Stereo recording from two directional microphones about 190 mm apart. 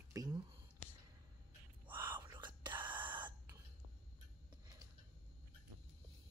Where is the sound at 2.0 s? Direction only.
25° right (ahead or behind).